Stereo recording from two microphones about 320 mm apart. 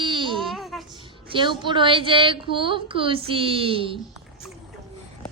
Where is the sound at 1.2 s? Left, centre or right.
Centre.